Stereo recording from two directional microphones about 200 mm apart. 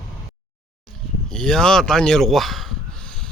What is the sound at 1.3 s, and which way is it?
Speech, 5° left (ahead or behind).